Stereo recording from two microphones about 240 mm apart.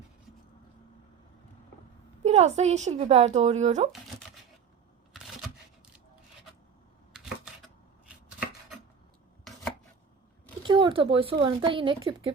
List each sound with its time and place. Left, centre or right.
2.2 s a woman's voice: right
7.1 s shuffling cards: centre
10.6 s speech: centre